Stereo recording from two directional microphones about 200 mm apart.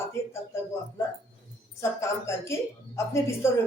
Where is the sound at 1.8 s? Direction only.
15° left (ahead or behind).